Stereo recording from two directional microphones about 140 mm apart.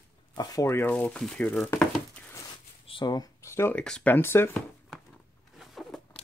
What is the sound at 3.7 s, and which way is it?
Speech, 5° left (ahead or behind).